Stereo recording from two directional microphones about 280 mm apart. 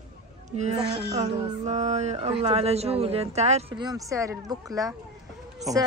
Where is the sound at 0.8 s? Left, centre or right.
Right.